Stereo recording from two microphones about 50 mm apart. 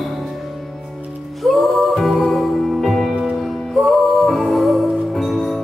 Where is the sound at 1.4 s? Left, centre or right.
Centre.